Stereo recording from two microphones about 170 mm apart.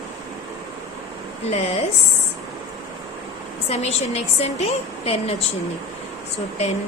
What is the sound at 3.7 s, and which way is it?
A woman's voice, 40° left (ahead or behind).